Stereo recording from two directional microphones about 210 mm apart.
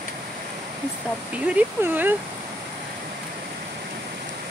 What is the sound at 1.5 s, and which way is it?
Speech, 10° right (ahead or behind).